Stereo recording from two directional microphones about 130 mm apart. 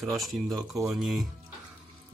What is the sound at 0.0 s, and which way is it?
Speech, centre (ahead or behind).